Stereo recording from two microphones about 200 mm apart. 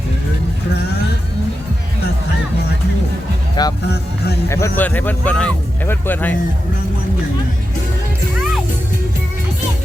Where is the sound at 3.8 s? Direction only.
55° left (ahead or behind).